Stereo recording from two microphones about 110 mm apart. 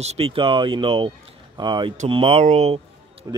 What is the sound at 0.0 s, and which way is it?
Speech, 70° right (ahead or behind).